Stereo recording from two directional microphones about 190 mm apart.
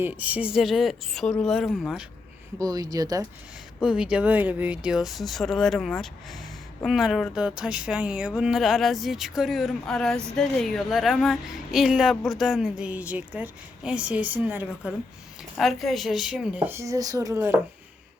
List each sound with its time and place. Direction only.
0.0 s speech: 10° right (ahead or behind)
2.6 s speech: 20° right (ahead or behind)
3.8 s speech: 5° right (ahead or behind)
15.5 s a woman's voice: centre (ahead or behind)